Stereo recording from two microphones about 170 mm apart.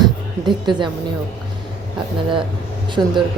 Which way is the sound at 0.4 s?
25° right (ahead or behind).